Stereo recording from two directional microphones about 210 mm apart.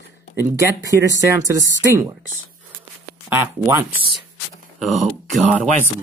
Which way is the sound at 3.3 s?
10° right (ahead or behind).